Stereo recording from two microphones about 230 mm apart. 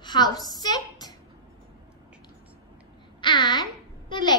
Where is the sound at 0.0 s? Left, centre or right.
Centre.